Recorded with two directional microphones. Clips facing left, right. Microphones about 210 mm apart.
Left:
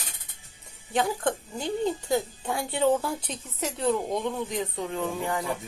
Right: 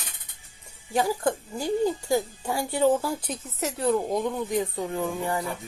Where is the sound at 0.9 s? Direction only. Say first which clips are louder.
Right 2 dB; 5° right (ahead or behind).